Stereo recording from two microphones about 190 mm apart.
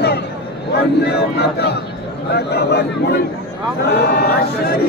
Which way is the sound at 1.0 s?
60° left (ahead or behind).